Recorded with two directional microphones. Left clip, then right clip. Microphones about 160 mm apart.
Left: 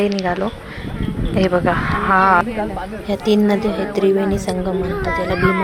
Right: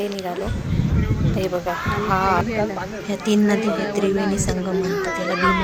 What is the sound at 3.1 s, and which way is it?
Speech, 10° left (ahead or behind).